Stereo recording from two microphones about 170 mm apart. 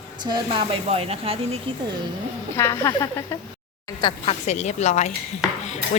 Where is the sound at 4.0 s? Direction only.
30° left (ahead or behind).